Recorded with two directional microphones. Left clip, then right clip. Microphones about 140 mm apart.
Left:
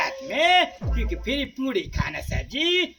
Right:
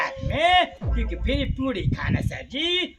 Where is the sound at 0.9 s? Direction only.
20° right (ahead or behind).